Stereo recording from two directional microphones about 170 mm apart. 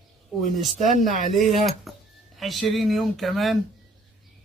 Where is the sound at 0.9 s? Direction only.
45° left (ahead or behind).